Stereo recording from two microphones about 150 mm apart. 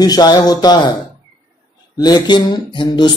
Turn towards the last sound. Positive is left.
turn(degrees=30)  # may be behind; listen again after turning